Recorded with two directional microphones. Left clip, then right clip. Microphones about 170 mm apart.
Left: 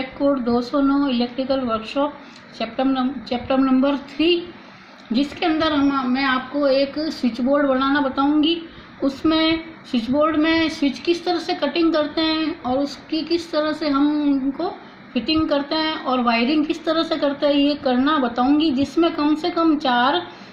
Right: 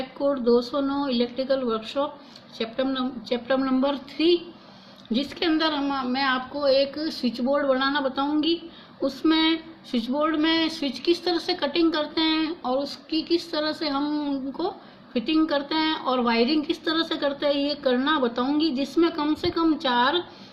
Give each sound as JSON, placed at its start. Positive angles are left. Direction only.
{"t": 0.4, "sound": "speech", "side_deg": -60}
{"t": 3.4, "sound": "speech", "side_deg": -65}